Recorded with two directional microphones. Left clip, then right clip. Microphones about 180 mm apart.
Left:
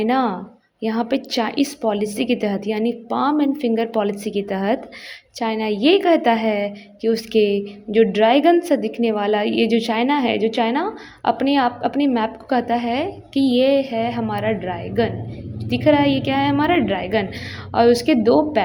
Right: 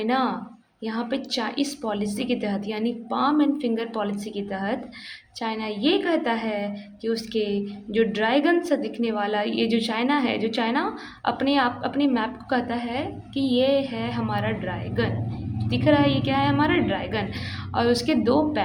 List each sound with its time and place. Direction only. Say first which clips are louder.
0.0 s a woman's voice: left 5 dB; 35° left (ahead or behind)